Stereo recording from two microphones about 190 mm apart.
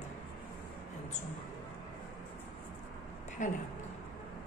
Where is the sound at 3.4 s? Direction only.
40° left (ahead or behind).